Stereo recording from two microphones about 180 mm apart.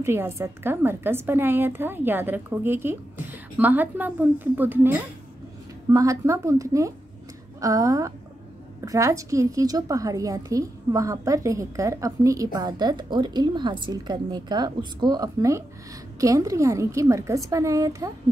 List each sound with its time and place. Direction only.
0.0 s a woman's voice: 15° right (ahead or behind)